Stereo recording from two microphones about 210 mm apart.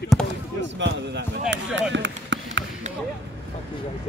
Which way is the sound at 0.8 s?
60° right (ahead or behind).